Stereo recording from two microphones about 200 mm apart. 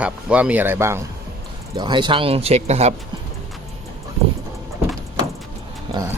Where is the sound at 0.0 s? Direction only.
5° right (ahead or behind); by 2.9 s 30° right (ahead or behind).